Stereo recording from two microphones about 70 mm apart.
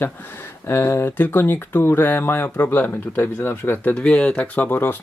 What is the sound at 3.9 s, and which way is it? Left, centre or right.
Speech, centre.